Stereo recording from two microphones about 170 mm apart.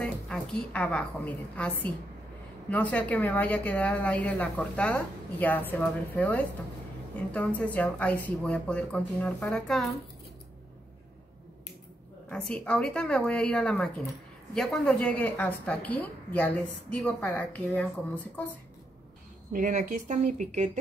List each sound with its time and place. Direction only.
0.0 s a woman's voice: 5° left (ahead or behind)
12.3 s a woman's voice: 5° left (ahead or behind)
19.5 s speech: 50° right (ahead or behind)